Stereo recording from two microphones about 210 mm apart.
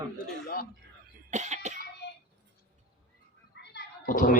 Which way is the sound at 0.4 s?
45° left (ahead or behind).